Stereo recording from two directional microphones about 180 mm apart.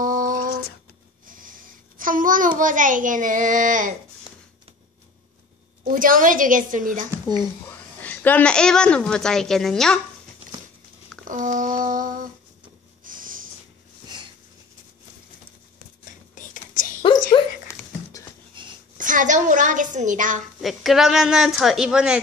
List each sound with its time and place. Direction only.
0.0 s a sound: 50° right (ahead or behind)
5.9 s a woman's voice: 50° right (ahead or behind)
8.0 s a woman's voice: 10° left (ahead or behind)
11.2 s a woman's voice: 45° right (ahead or behind)
13.0 s snort: 50° right (ahead or behind)
14.1 s sniff: 25° right (ahead or behind)
16.8 s a sound: 45° left (ahead or behind)
17.3 s patter: 20° left (ahead or behind)
18.5 s a sound: 25° right (ahead or behind)
18.9 s a woman's voice: 45° right (ahead or behind)
20.6 s a woman's voice: centre (ahead or behind)